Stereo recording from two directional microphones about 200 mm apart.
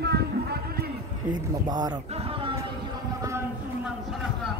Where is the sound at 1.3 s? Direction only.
20° right (ahead or behind).